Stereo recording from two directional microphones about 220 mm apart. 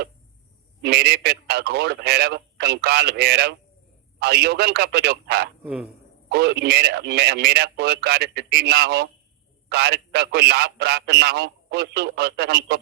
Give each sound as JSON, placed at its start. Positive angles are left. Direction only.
{"t": 0.8, "sound": "a man's voice", "side_deg": -50}
{"t": 5.6, "sound": "speech", "side_deg": -5}
{"t": 6.2, "sound": "a man's voice", "side_deg": -50}